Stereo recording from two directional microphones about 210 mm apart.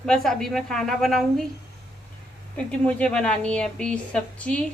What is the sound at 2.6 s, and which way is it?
A woman's voice, 5° left (ahead or behind).